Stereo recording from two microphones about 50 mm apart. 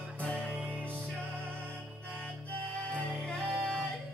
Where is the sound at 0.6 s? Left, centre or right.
Left.